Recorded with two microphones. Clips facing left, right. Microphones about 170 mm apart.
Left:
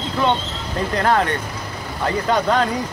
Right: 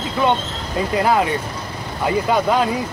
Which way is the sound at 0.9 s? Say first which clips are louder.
Right 1 dB; 10° right (ahead or behind).